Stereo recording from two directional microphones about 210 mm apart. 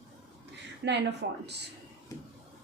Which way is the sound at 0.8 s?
60° right (ahead or behind).